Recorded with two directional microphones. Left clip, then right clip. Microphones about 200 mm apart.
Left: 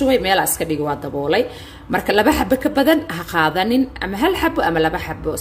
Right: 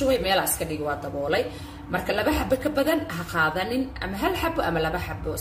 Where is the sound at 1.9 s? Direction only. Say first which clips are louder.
Left 9 dB; 45° left (ahead or behind).